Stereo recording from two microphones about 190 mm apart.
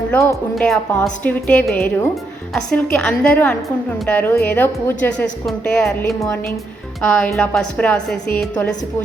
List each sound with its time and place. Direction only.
0.1 s speech: 15° left (ahead or behind)
0.5 s a woman's voice: 5° left (ahead or behind)
6.1 s a woman's voice: 15° left (ahead or behind)
7.1 s a woman's voice: 5° left (ahead or behind)